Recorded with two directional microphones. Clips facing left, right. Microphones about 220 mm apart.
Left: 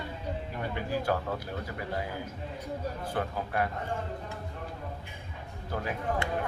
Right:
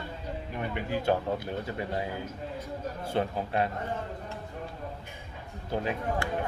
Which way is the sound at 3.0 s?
25° right (ahead or behind).